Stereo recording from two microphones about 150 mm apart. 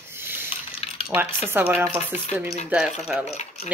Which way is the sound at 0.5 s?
40° left (ahead or behind).